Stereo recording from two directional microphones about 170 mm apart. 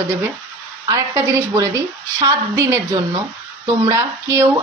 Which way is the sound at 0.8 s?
15° right (ahead or behind).